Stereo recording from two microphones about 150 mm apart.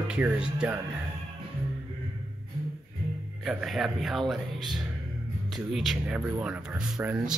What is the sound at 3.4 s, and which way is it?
Speech, centre (ahead or behind).